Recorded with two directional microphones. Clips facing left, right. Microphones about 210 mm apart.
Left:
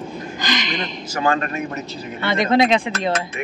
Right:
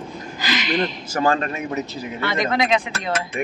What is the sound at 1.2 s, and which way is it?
Speech, 30° right (ahead or behind).